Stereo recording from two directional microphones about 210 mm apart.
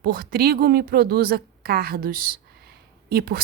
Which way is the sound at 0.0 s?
45° right (ahead or behind).